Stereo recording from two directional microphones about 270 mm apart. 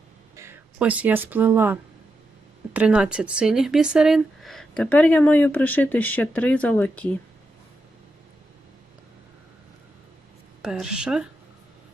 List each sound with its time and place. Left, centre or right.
0.3 s speech: centre
10.6 s speech: centre